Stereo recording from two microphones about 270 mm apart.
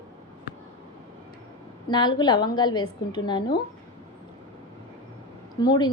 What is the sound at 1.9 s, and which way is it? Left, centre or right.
A woman's voice, centre.